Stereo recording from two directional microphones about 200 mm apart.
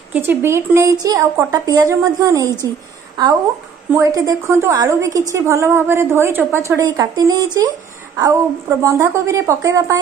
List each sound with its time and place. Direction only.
0.1 s a woman's voice: 10° right (ahead or behind)
3.9 s a woman's voice: 15° right (ahead or behind)